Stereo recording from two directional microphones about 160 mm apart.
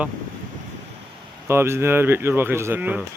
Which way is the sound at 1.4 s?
15° right (ahead or behind).